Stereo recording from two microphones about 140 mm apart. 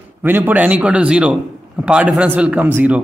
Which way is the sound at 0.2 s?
15° right (ahead or behind).